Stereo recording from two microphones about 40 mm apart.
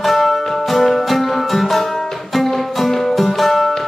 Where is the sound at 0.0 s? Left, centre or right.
Centre.